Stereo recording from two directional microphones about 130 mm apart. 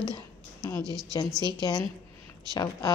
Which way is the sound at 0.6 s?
20° left (ahead or behind).